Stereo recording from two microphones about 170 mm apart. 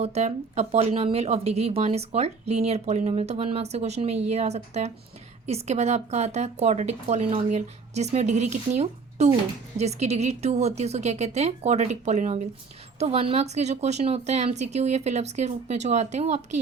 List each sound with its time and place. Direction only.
0.0 s speech: 40° right (ahead or behind)